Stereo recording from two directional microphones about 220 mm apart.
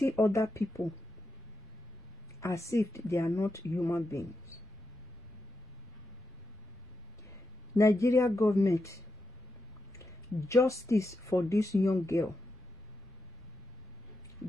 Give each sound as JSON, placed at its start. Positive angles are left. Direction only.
{"t": 0.0, "sound": "speech", "side_deg": 10}
{"t": 2.4, "sound": "speech", "side_deg": 15}
{"t": 7.7, "sound": "speech", "side_deg": 15}